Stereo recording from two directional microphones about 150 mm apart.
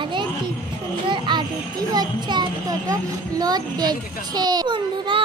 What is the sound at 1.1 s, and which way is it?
Children playing, 30° right (ahead or behind).